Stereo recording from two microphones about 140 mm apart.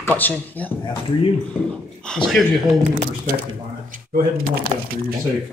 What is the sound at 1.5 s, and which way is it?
Groan, 5° left (ahead or behind).